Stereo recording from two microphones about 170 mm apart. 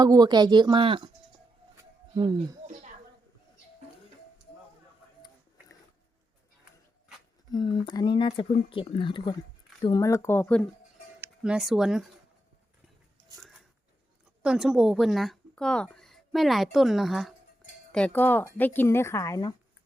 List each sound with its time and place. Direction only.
0.0 s speech: 25° right (ahead or behind)
1.7 s music: 25° right (ahead or behind)
7.5 s speech: 30° left (ahead or behind); by 10.7 s 10° left (ahead or behind)
11.2 s speech: 5° right (ahead or behind)
14.4 s a woman's voice: 5° right (ahead or behind); by 19.5 s 20° left (ahead or behind)